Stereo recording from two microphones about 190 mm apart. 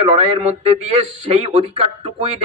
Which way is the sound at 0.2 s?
30° right (ahead or behind).